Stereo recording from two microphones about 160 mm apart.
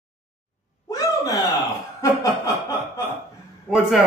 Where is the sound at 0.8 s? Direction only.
20° left (ahead or behind).